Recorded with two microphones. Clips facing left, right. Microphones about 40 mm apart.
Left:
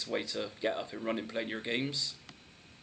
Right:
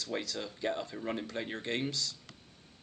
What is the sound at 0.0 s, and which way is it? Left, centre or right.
Speech, centre.